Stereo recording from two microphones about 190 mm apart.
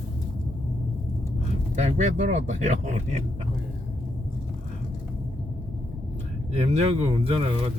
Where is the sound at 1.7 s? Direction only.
40° right (ahead or behind).